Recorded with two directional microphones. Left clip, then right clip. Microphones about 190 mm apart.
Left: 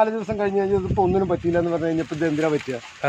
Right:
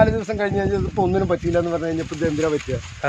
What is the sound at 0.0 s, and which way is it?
Speech, centre (ahead or behind).